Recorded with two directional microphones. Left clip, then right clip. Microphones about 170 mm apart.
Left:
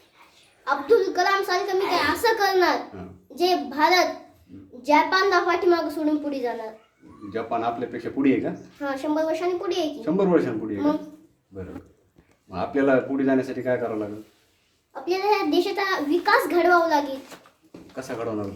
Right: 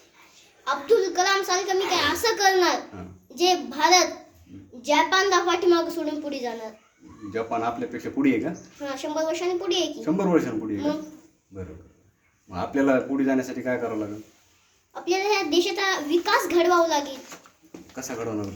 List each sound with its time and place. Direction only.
0.6 s a child's voice: 10° left (ahead or behind)
7.3 s speech: 20° right (ahead or behind)
8.8 s a child's voice: 10° left (ahead or behind)
10.0 s a man's voice: 20° right (ahead or behind)
12.5 s a man's voice: 15° right (ahead or behind)
15.0 s a child's voice: 10° left (ahead or behind)
17.9 s speech: 20° right (ahead or behind)